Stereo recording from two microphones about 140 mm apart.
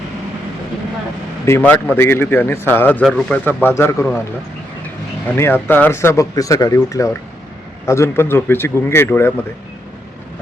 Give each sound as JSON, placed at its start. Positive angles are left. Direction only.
{"t": 1.5, "sound": "a man's voice", "side_deg": 15}
{"t": 5.4, "sound": "a man's voice", "side_deg": 15}